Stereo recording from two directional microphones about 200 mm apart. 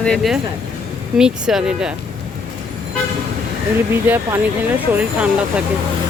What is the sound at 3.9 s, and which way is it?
Speech, 10° right (ahead or behind).